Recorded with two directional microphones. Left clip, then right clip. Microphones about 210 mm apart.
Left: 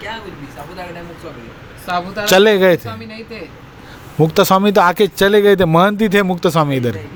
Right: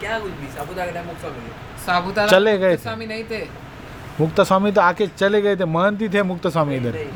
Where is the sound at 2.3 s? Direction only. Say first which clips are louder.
Left 6 dB; 45° left (ahead or behind).